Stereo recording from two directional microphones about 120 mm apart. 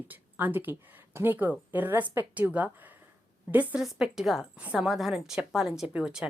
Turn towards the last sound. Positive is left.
turn(degrees=-5)  # may be behind; listen again after turning